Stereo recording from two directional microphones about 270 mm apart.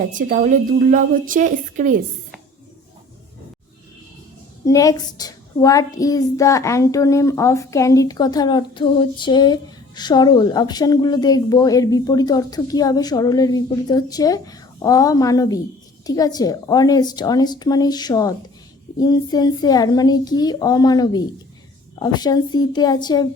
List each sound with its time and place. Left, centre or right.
0.1 s a woman's voice: right
4.6 s a woman's voice: centre